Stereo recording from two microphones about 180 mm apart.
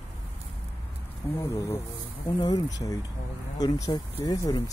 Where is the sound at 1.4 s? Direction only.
15° left (ahead or behind).